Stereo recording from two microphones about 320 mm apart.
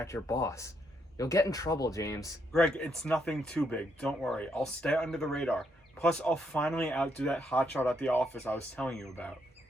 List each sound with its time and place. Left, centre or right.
0.0 s speech: centre